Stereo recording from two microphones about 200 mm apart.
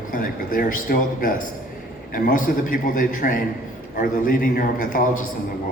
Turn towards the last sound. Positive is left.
turn(degrees=40)  # may be behind; listen again after turning